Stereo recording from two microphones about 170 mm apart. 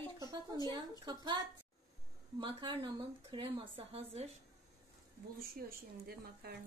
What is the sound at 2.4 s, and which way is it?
Speech, 30° right (ahead or behind).